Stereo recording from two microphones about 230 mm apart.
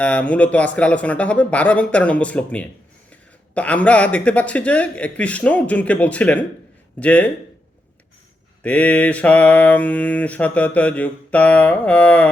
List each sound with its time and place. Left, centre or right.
0.0 s mantra: centre
8.6 s mantra: centre